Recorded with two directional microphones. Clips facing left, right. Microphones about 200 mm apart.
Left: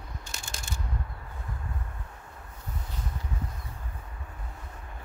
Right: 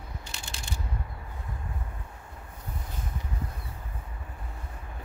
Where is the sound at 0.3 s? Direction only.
45° left (ahead or behind).